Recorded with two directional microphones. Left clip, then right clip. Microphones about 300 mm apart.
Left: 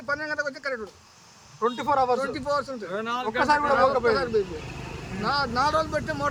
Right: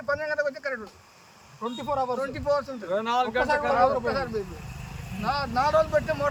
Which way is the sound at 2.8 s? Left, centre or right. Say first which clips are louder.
Right 4 dB; right.